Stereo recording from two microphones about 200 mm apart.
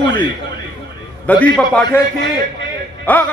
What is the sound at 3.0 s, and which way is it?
Speech, 10° left (ahead or behind).